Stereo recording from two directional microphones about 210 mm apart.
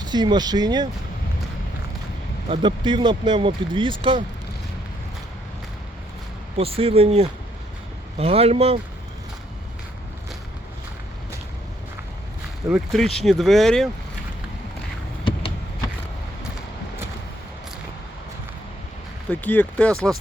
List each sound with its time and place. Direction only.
0.0 s speech: 20° right (ahead or behind)
2.5 s speech: 20° right (ahead or behind)
6.6 s speech: 25° right (ahead or behind)
12.6 s speech: centre (ahead or behind)
15.2 s a sound: 25° left (ahead or behind)
19.3 s speech: 10° left (ahead or behind)